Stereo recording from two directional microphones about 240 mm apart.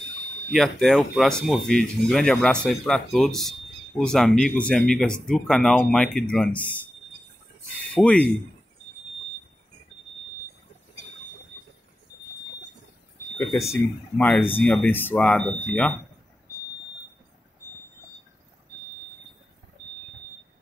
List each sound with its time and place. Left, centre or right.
0.5 s speech: centre
7.9 s speech: centre
13.7 s speech: centre